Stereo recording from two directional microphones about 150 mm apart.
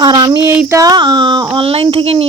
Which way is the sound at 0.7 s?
25° right (ahead or behind).